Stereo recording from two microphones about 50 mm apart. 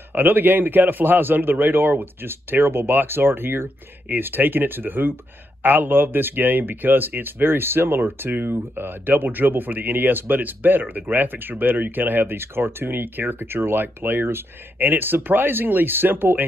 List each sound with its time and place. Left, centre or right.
0.1 s speech: right